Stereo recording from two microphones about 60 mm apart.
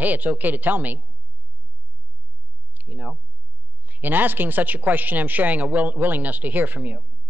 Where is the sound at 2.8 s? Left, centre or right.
Right.